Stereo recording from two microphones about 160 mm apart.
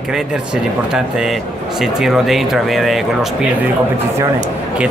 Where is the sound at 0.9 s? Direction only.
5° right (ahead or behind).